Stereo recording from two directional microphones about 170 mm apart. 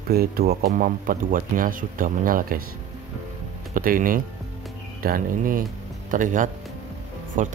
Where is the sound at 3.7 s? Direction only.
55° right (ahead or behind).